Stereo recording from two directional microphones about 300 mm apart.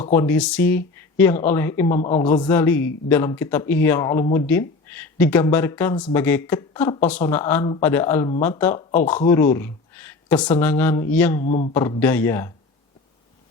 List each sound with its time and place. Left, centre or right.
0.1 s speech: centre
11.4 s speech: left
11.7 s speech: centre